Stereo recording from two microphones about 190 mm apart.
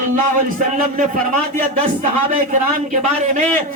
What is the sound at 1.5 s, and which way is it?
A man's voice, 40° right (ahead or behind).